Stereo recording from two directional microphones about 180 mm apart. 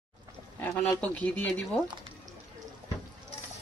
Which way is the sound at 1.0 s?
10° left (ahead or behind).